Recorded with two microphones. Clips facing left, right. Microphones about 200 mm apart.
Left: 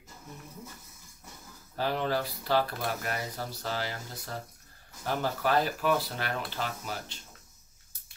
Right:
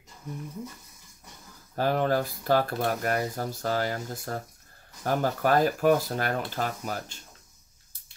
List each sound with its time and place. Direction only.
1.8 s speech: 50° right (ahead or behind)